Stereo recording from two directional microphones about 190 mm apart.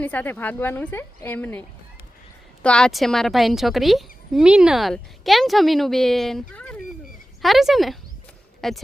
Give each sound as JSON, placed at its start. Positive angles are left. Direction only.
{"t": 0.0, "sound": "a woman's voice", "side_deg": 10}
{"t": 2.6, "sound": "a woman's voice", "side_deg": 5}